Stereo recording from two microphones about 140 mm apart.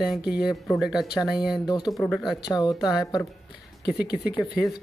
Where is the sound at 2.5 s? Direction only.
30° left (ahead or behind).